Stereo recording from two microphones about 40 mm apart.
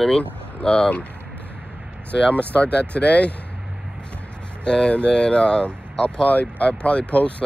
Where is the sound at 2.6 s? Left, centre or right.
Left.